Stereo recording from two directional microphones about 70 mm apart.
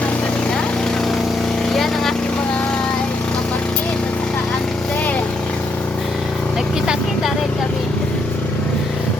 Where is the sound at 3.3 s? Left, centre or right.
Centre.